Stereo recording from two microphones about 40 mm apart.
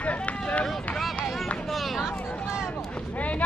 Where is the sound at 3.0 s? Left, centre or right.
Left.